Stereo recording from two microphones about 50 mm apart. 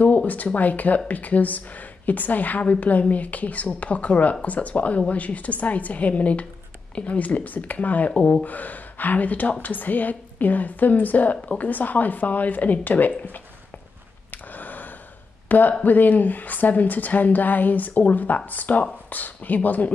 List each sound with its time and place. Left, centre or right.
0.0 s speech: left
8.1 s speech: left
8.5 s speech: left
14.3 s a sound: left
15.8 s speech: left